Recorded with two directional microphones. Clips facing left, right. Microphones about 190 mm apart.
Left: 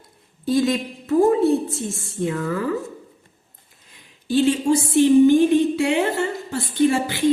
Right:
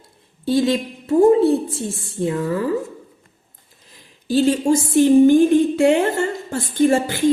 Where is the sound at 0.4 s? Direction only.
30° right (ahead or behind).